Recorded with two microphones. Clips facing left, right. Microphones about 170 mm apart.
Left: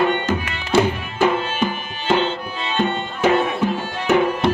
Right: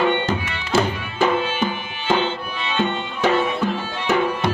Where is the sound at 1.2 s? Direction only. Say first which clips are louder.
Left 1 dB; 10° left (ahead or behind).